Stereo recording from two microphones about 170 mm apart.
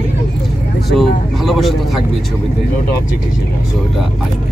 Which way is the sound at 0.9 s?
Centre (ahead or behind).